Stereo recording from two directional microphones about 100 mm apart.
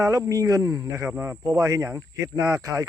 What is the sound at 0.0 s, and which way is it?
Speech, 30° right (ahead or behind).